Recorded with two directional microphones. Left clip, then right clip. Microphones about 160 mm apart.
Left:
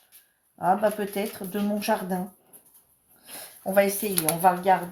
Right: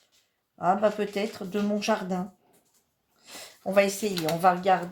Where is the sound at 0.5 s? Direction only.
35° right (ahead or behind).